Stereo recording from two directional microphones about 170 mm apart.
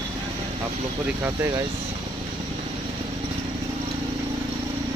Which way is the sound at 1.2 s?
20° right (ahead or behind).